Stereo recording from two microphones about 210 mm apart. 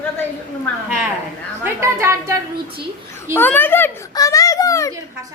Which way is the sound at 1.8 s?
15° right (ahead or behind).